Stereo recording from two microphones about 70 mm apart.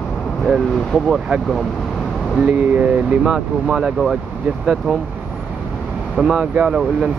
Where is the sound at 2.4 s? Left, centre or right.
Right.